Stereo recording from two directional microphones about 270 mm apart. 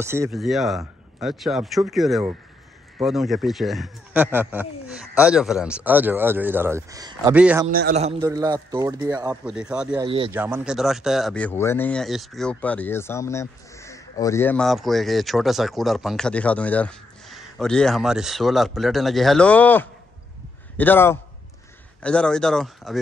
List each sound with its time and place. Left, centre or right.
0.0 s speech: centre
7.6 s a man's voice: right
8.2 s speech: centre
10.0 s a man's voice: centre
10.3 s a man's voice: centre